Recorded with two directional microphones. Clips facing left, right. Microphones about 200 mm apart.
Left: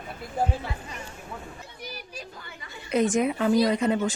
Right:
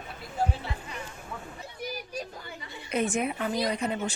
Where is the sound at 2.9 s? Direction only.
90° left.